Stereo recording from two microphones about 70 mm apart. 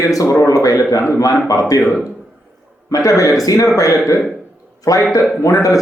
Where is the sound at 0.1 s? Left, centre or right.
Left.